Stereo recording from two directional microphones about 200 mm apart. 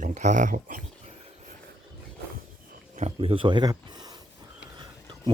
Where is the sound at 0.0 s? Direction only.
40° right (ahead or behind).